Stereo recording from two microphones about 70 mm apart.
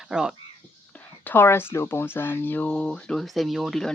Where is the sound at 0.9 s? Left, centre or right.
Left.